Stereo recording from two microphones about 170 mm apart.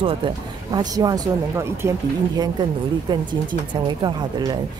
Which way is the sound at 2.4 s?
25° right (ahead or behind).